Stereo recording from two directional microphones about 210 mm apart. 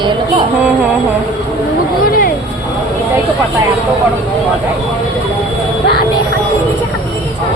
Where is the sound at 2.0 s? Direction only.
45° left (ahead or behind).